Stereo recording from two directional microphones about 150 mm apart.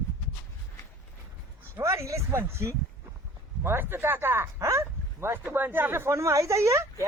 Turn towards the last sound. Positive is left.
turn(degrees=-20)  # may be behind; listen again after turning